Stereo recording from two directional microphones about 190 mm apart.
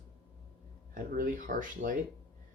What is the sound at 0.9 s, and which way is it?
Speech, 45° right (ahead or behind).